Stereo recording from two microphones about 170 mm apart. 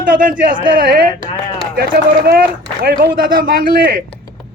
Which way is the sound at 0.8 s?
55° right (ahead or behind).